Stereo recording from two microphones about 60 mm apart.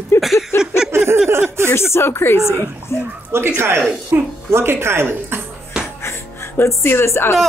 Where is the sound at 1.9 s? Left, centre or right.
Left.